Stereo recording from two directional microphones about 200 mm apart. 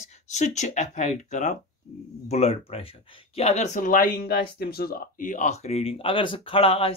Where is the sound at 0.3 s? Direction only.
35° left (ahead or behind).